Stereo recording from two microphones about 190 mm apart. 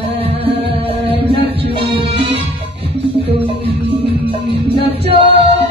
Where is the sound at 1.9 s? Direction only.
30° right (ahead or behind).